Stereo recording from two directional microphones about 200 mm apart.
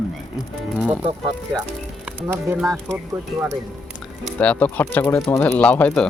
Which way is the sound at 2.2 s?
10° right (ahead or behind).